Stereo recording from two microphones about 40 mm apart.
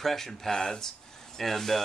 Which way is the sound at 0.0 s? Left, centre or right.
Centre.